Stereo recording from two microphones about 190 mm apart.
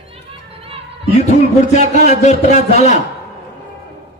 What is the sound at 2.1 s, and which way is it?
Speech, 40° left (ahead or behind).